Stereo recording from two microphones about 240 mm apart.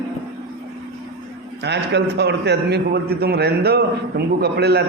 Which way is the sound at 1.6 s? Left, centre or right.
Right.